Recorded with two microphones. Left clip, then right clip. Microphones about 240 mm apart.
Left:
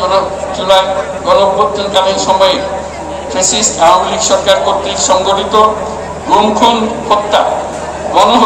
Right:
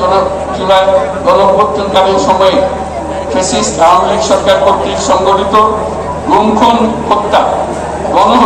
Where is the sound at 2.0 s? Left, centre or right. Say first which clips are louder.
Right 1 dB; left.